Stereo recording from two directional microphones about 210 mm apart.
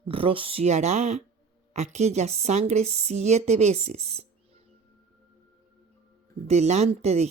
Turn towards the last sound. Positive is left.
turn(degrees=-30)  # may be behind; listen again after turning